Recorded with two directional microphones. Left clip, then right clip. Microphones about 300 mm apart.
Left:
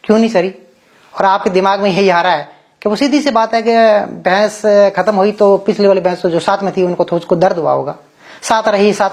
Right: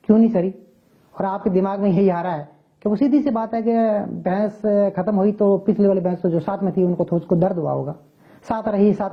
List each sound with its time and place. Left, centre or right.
0.0 s speech: centre
5.4 s speech: left
5.7 s speech: centre
8.4 s speech: centre